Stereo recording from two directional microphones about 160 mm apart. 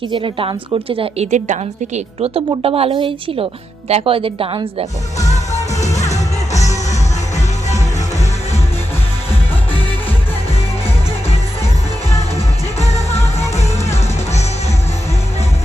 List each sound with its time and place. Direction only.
0.1 s a woman's voice: 30° right (ahead or behind)
2.6 s a woman's voice: 35° right (ahead or behind)
5.2 s music: 45° left (ahead or behind)